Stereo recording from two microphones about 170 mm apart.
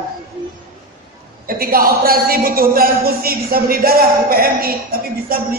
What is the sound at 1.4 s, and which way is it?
A woman's voice, 60° right (ahead or behind).